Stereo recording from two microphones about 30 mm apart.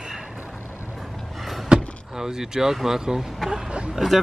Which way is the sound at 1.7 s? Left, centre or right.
Right.